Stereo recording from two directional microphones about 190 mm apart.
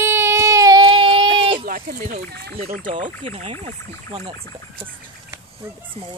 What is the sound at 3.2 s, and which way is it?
Speech, 30° right (ahead or behind).